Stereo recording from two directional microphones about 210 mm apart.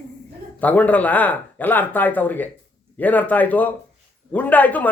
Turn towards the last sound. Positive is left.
turn(degrees=5)  # may be behind; listen again after turning